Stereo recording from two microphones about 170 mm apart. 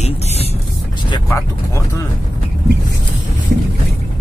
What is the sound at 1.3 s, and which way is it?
Speech, 15° left (ahead or behind).